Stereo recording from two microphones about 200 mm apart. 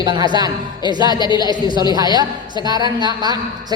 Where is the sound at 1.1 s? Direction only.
20° left (ahead or behind).